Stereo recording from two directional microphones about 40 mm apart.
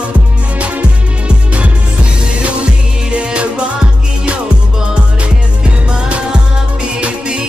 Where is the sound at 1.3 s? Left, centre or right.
Right.